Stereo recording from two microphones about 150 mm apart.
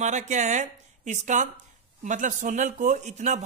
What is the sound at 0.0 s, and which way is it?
Speech, 50° right (ahead or behind).